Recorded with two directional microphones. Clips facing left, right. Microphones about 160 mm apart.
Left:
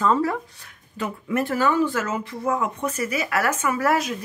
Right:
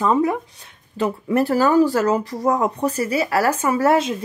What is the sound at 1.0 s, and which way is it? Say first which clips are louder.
Speech: right 6 dB; 35° right (ahead or behind).